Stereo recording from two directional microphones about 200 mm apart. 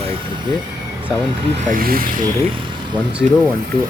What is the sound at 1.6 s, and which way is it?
Speech, 45° right (ahead or behind).